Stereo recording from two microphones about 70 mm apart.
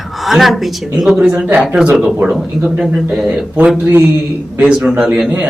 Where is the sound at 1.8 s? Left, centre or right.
Centre.